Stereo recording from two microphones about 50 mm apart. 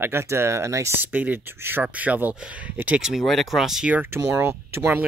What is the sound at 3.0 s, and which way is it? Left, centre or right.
Speech, centre.